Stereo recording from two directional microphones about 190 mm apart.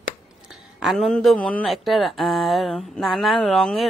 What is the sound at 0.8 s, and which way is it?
Speech, centre (ahead or behind).